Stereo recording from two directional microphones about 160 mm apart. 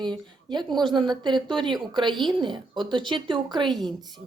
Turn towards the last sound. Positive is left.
turn(degrees=-30)  # may be behind; listen again after turning